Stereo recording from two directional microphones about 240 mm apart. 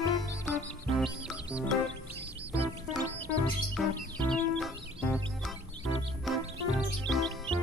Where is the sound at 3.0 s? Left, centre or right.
Centre.